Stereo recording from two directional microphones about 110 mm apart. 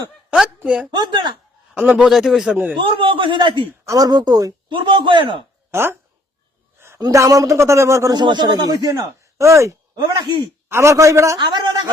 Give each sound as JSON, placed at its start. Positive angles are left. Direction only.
{"t": 0.3, "sound": "a woman's voice", "side_deg": -10}
{"t": 0.9, "sound": "a man's voice", "side_deg": -45}
{"t": 1.7, "sound": "a man's voice", "side_deg": -15}
{"t": 2.0, "sound": "speech", "side_deg": 0}
{"t": 2.8, "sound": "a man's voice", "side_deg": -50}
{"t": 3.8, "sound": "speech", "side_deg": -35}
{"t": 4.7, "sound": "a man's voice", "side_deg": -50}
{"t": 5.7, "sound": "a man's voice", "side_deg": -20}
{"t": 6.7, "sound": "a sound", "side_deg": -25}
{"t": 7.0, "sound": "a man's voice", "side_deg": -30}
{"t": 8.2, "sound": "speech", "side_deg": -45}
{"t": 10.2, "sound": "a man's voice", "side_deg": -45}
{"t": 10.7, "sound": "a man's voice", "side_deg": -25}
{"t": 11.3, "sound": "a man's voice", "side_deg": -45}